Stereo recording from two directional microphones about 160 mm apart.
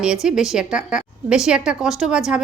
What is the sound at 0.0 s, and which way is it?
A woman's voice, 5° right (ahead or behind).